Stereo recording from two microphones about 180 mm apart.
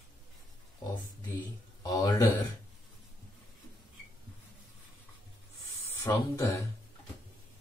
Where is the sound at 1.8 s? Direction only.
20° left (ahead or behind).